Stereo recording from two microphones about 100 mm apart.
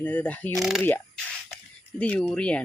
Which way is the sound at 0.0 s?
15° left (ahead or behind).